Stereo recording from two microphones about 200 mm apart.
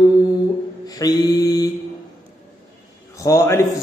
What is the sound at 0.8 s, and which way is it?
Music, 20° left (ahead or behind).